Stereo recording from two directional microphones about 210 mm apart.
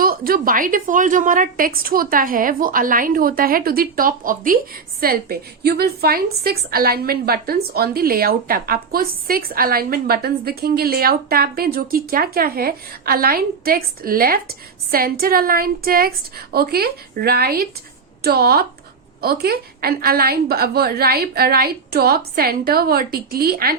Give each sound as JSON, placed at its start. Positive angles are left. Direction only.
{"t": 0.0, "sound": "a woman's voice", "side_deg": -45}